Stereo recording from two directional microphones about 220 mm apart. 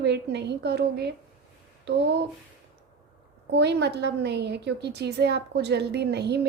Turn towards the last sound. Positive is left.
turn(degrees=-50)  # may be behind; listen again after turning